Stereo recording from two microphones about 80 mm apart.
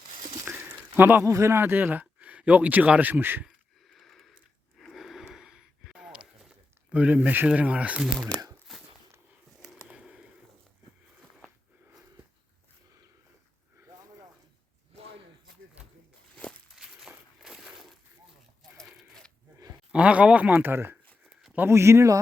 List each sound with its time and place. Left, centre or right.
0.9 s speech: right
3.8 s a sound: centre
6.9 s speech: centre
8.3 s speech: centre
8.7 s a sound: centre
9.8 s a sound: centre
16.7 s crushing: centre
18.9 s sheep: centre
19.9 s speech: centre; by 22.2 s right